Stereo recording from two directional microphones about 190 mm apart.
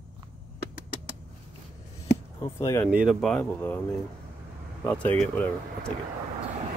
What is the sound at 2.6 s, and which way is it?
Speech, 15° left (ahead or behind).